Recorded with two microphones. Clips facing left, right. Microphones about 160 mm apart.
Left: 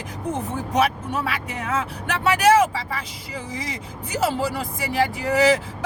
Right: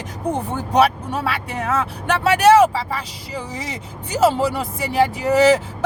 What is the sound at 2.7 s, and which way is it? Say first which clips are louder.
Speech: right 4 dB; 30° right (ahead or behind).